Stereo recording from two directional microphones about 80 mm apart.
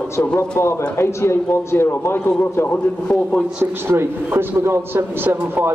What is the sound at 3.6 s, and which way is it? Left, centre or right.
A man's voice, right.